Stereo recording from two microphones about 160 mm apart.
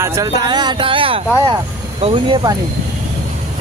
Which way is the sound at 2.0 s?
35° right (ahead or behind).